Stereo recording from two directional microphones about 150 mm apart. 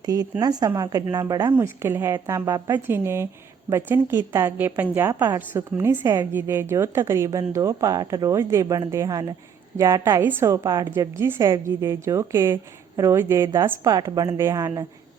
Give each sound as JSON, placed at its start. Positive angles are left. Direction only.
{"t": 0.0, "sound": "speech", "side_deg": -25}
{"t": 1.5, "sound": "a woman's voice", "side_deg": -15}